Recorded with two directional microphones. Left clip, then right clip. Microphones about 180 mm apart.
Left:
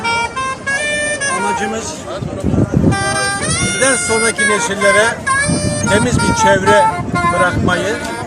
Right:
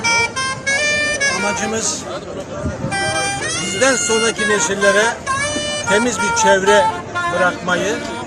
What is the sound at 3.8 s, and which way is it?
Speech, 15° right (ahead or behind).